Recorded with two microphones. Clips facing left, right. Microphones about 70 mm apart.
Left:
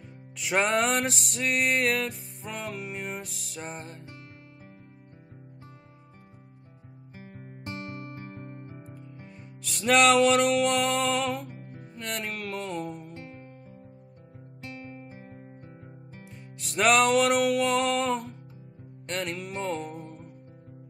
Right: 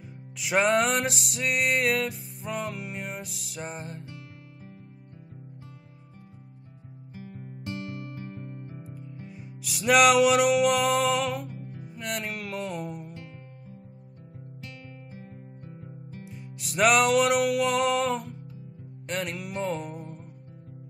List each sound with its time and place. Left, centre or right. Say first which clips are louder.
0.4 s music: right 2 dB; centre
7.2 s music: right 3 dB; left
8.9 s music: right 3 dB; centre
14.6 s music: left 6 dB; left
16.3 s music: right 3 dB; centre